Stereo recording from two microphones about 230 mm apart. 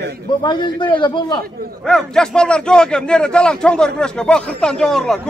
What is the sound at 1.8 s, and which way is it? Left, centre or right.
A man's voice, centre.